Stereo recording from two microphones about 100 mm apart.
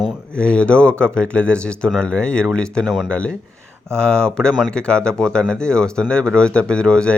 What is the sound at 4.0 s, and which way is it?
Speech, 10° left (ahead or behind).